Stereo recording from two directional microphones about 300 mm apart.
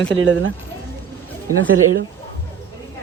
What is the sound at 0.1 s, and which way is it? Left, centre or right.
Speech, right.